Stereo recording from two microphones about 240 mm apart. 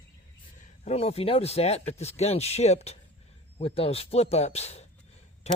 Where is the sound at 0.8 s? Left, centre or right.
Left.